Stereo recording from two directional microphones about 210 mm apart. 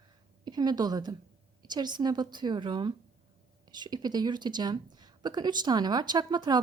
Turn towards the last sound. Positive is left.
turn(degrees=-20)  # may be behind; listen again after turning